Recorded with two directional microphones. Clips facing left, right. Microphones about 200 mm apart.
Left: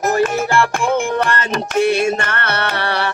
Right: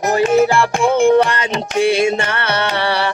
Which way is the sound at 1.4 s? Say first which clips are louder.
Even; 50° left (ahead or behind).